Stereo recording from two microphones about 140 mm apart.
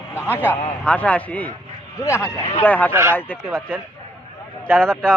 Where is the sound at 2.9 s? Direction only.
15° right (ahead or behind).